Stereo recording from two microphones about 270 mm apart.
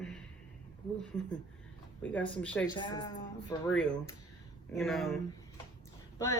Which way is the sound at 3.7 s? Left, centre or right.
Centre.